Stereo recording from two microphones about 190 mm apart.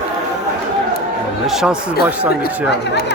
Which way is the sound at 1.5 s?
Centre (ahead or behind).